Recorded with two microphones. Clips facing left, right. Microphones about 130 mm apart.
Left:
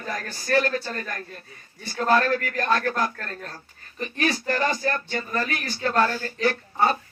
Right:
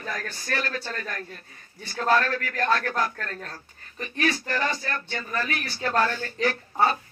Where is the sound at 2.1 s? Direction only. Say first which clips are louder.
Left 2 dB; 35° left (ahead or behind).